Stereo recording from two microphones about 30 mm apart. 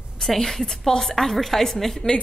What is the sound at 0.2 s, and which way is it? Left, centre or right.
A woman's voice, centre.